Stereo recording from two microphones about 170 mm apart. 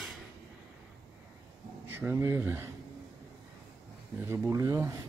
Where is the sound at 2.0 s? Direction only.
15° right (ahead or behind).